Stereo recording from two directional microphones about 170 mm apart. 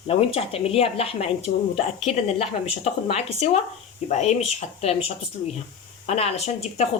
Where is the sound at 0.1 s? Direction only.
35° left (ahead or behind).